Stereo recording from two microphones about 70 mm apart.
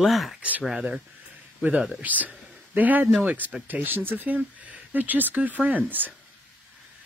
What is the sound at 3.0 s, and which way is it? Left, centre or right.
Speech, centre.